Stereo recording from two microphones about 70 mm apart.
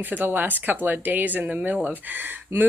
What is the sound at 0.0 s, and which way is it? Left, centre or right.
Speech, right.